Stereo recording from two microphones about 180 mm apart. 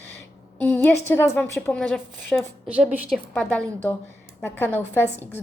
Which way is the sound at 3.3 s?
5° left (ahead or behind).